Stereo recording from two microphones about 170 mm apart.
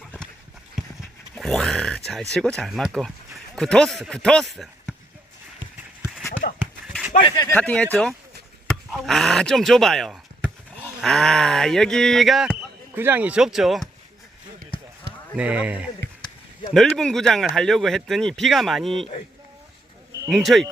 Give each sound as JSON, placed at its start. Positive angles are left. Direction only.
{"t": 1.4, "sound": "a sound", "side_deg": 0}
{"t": 2.3, "sound": "a man's voice", "side_deg": 5}
{"t": 6.4, "sound": "a sound", "side_deg": 65}
{"t": 7.2, "sound": "speech", "side_deg": 30}
{"t": 7.4, "sound": "speech", "side_deg": 10}
{"t": 12.9, "sound": "speech", "side_deg": -10}
{"t": 15.4, "sound": "a man's voice", "side_deg": -5}
{"t": 16.7, "sound": "speech", "side_deg": 5}
{"t": 20.3, "sound": "speech", "side_deg": 0}